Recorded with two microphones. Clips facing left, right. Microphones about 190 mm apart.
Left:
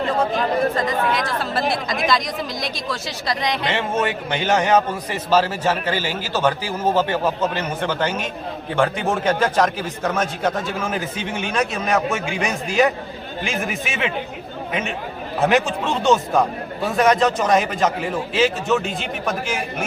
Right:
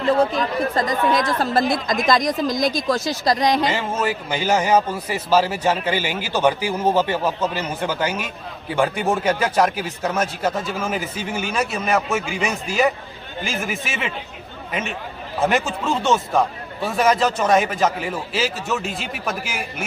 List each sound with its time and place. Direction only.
0.8 s speech: 40° right (ahead or behind)
3.7 s speech: 5° right (ahead or behind)